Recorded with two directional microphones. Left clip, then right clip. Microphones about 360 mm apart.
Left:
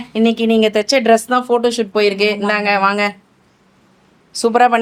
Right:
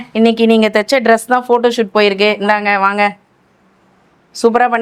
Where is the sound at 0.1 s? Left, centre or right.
Right.